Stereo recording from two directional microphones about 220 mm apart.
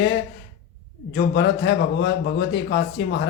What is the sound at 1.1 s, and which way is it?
Speech, 50° left (ahead or behind).